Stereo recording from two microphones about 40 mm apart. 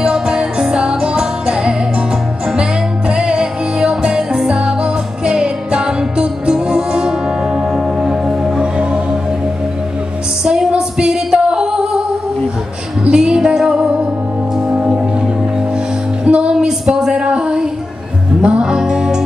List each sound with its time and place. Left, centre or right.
0.0 s music: right
3.1 s music: right
7.7 s music: centre
8.5 s music: right
10.4 s music: right
13.1 s music: centre
16.3 s music: right
16.5 s a sound: centre
18.4 s music: right